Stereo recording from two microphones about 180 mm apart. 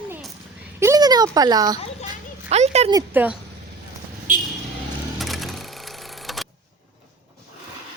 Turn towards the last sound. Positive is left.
turn(degrees=0)  # may be behind; listen again after turning